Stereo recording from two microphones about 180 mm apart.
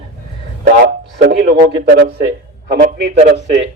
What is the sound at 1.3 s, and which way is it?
Speech, 60° right (ahead or behind).